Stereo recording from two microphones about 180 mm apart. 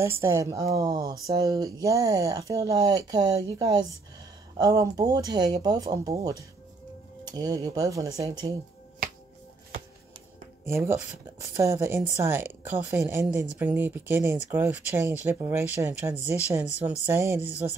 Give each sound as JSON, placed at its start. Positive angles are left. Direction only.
{"t": 0.0, "sound": "speech", "side_deg": -15}
{"t": 10.6, "sound": "speech", "side_deg": -15}